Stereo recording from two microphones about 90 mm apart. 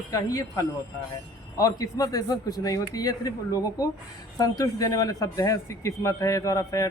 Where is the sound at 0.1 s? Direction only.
40° left (ahead or behind).